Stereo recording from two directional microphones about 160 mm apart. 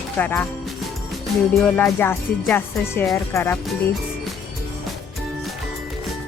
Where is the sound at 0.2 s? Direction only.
10° left (ahead or behind).